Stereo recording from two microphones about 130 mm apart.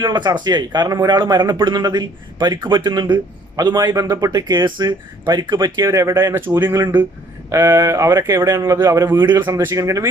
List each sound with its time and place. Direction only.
0.0 s speech: 35° right (ahead or behind)